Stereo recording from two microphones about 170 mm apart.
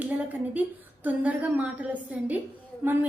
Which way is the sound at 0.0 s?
10° right (ahead or behind).